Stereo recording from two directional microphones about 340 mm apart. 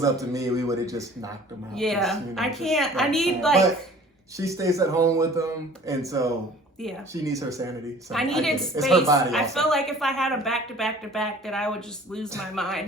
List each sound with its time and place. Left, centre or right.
0.0 s speech: centre
1.7 s a woman's voice: centre
4.4 s speech: centre
8.1 s a woman's voice: centre